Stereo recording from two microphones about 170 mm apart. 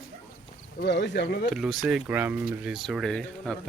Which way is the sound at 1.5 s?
Centre (ahead or behind).